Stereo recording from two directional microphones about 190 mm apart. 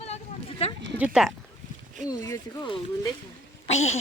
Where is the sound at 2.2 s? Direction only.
20° left (ahead or behind).